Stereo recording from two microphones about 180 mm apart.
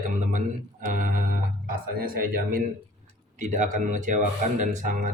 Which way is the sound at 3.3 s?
45° right (ahead or behind).